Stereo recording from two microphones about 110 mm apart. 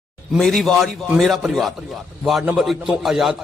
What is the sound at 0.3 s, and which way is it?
A man's voice, 5° left (ahead or behind).